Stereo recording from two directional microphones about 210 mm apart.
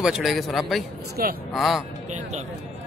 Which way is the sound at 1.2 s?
45° right (ahead or behind).